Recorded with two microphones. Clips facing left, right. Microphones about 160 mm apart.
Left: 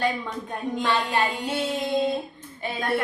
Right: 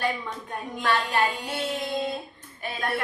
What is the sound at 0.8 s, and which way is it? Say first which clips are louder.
A woman's voice: even; 25° left (ahead or behind).